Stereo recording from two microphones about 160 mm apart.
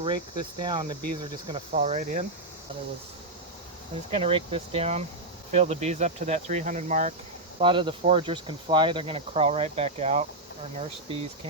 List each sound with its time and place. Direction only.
0.6 s speech: 30° right (ahead or behind)
1.7 s speech: 45° right (ahead or behind)
4.1 s speech: 35° right (ahead or behind)
7.6 s speech: 30° right (ahead or behind)